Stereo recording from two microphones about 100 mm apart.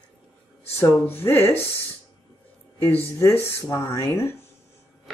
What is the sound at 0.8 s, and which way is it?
Speech, 25° left (ahead or behind).